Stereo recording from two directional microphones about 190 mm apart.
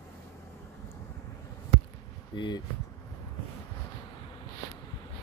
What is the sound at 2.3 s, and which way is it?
Speech, 25° left (ahead or behind).